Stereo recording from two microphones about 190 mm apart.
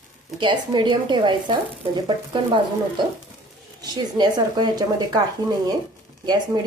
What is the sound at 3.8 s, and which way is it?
A woman's voice, 20° right (ahead or behind).